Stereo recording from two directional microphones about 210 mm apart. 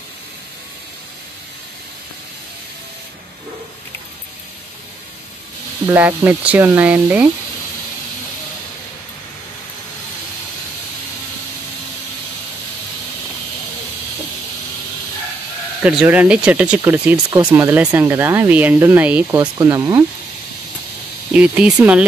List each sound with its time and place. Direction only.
5.9 s speech: 10° right (ahead or behind)
15.8 s speech: 5° right (ahead or behind)
19.3 s speech: 20° right (ahead or behind)
21.3 s speech: 5° right (ahead or behind)